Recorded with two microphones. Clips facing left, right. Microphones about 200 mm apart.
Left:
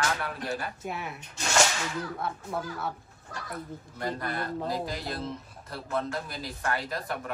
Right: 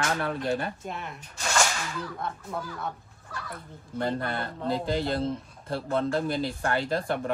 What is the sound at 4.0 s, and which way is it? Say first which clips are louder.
Speech: right 4 dB; 30° right (ahead or behind).